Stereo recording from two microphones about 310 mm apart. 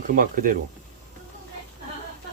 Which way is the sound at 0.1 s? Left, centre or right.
Right.